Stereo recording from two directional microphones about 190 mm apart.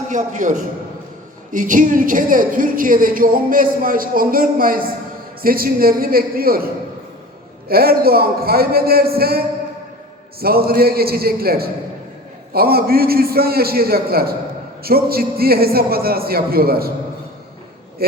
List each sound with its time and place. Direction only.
0.1 s a man's voice: 40° right (ahead or behind)
7.7 s a woman's voice: 55° right (ahead or behind)
10.4 s a woman's voice: 55° right (ahead or behind)